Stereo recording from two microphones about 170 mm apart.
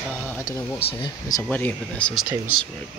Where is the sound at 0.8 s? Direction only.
35° left (ahead or behind).